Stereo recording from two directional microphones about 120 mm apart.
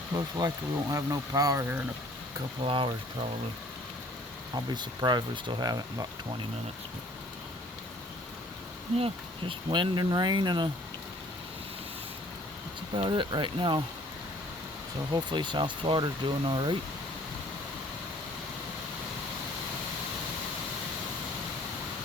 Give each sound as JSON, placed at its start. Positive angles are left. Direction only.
{"t": 0.3, "sound": "speech", "side_deg": -30}
{"t": 2.6, "sound": "speech", "side_deg": -45}
{"t": 4.5, "sound": "speech", "side_deg": -35}
{"t": 9.0, "sound": "speech", "side_deg": -50}
{"t": 9.6, "sound": "speech", "side_deg": -40}
{"t": 13.0, "sound": "speech", "side_deg": -40}
{"t": 15.1, "sound": "speech", "side_deg": -40}